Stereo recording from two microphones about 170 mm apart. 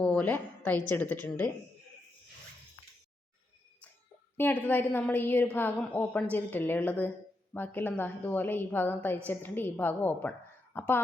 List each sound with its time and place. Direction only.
0.0 s a woman's voice: 5° left (ahead or behind)
4.4 s a woman's voice: 10° left (ahead or behind)